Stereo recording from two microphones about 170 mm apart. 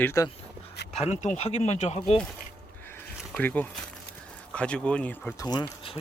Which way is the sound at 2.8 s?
10° left (ahead or behind).